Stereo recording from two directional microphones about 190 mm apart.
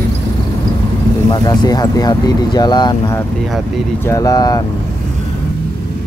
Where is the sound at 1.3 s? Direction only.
20° left (ahead or behind).